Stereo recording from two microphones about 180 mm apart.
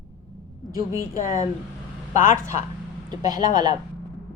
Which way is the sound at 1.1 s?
50° left (ahead or behind).